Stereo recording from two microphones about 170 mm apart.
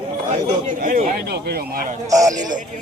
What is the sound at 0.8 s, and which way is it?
Speech, 55° right (ahead or behind).